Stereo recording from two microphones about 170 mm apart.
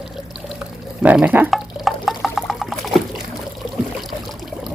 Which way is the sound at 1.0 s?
10° right (ahead or behind).